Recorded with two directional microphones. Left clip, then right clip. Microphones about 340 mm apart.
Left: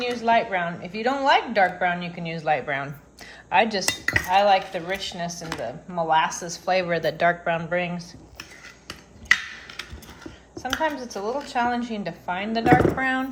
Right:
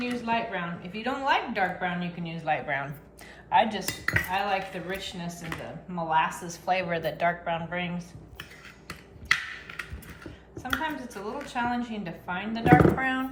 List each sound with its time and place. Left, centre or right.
0.0 s a woman's voice: centre
10.5 s a woman's voice: centre